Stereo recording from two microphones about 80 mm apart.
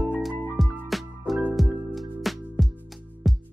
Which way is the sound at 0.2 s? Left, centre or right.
Centre.